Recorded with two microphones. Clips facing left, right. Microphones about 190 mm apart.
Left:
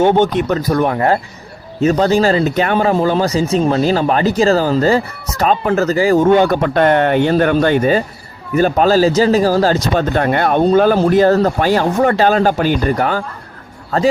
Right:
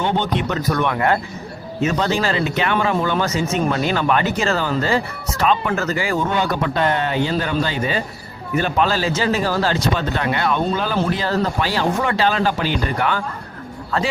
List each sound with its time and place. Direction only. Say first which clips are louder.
0.0 s speech: left 8 dB; 45° left (ahead or behind)
6.3 s speech: left 8 dB; 55° left (ahead or behind); by 14.1 s 40° left (ahead or behind)